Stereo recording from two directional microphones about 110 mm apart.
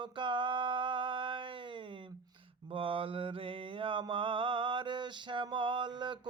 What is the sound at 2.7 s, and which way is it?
Mantra, 55° right (ahead or behind).